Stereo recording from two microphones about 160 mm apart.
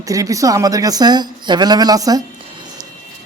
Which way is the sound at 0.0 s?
20° right (ahead or behind).